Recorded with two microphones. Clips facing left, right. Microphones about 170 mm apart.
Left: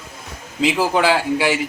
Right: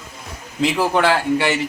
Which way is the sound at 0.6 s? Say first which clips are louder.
Even; 5° left (ahead or behind).